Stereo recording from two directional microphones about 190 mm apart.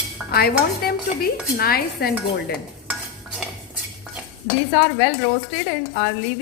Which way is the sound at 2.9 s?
5° right (ahead or behind).